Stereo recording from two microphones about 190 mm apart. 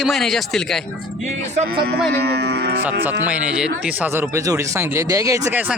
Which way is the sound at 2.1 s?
60° right (ahead or behind).